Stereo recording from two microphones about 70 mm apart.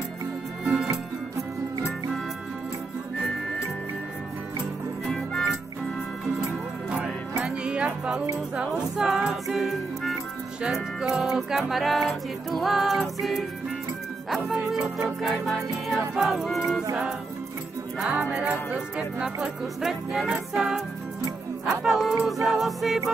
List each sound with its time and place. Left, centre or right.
5.0 s music: centre
6.9 s music: centre
18.4 s speech: centre
19.8 s music: centre